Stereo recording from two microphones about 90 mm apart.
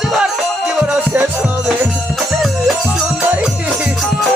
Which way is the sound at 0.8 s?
20° right (ahead or behind).